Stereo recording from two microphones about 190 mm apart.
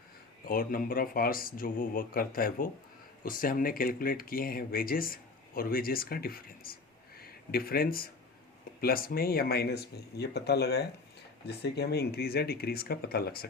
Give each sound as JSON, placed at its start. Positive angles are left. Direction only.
{"t": 0.4, "sound": "speech", "side_deg": 50}